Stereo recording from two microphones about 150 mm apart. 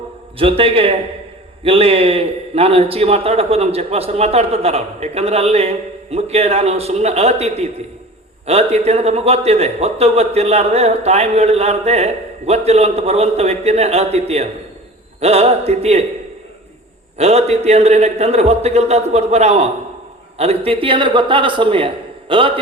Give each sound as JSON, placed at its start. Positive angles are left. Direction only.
{"t": 0.3, "sound": "a man's voice", "side_deg": -35}
{"t": 17.2, "sound": "a man's voice", "side_deg": -45}